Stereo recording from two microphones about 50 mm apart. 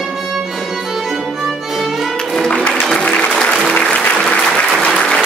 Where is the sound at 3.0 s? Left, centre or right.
Centre.